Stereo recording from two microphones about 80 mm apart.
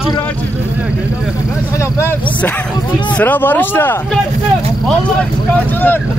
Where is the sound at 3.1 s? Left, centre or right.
Left.